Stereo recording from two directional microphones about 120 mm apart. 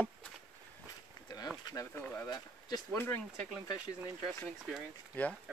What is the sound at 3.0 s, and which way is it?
Speech, 15° left (ahead or behind).